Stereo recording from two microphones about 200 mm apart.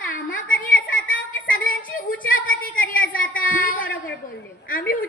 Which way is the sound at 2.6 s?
45° left (ahead or behind).